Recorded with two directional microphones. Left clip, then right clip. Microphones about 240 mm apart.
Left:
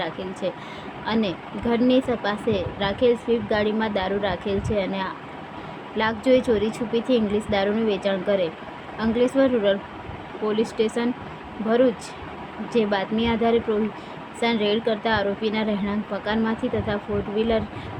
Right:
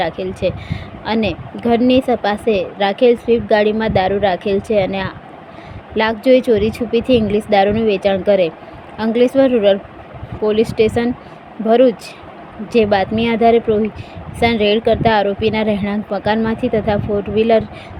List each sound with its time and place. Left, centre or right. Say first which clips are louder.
0.0 s speech: right 9 dB; right